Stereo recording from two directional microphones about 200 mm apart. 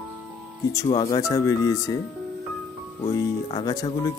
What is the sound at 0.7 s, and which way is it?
Speech, 20° left (ahead or behind).